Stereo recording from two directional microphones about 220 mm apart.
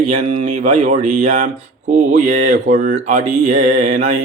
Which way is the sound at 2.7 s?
40° right (ahead or behind).